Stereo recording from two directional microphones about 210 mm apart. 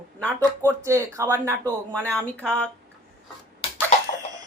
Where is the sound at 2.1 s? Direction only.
10° left (ahead or behind).